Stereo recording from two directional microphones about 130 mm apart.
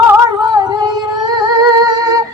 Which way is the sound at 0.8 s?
30° right (ahead or behind).